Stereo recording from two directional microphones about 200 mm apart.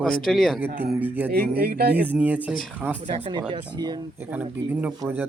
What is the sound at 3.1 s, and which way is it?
Speech, 25° right (ahead or behind).